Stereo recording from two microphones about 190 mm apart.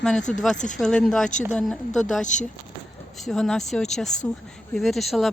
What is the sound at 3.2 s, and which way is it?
Speech, centre (ahead or behind).